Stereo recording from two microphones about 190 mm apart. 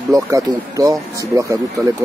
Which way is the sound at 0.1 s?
15° right (ahead or behind).